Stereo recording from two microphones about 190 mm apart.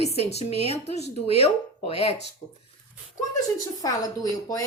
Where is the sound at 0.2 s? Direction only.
35° left (ahead or behind).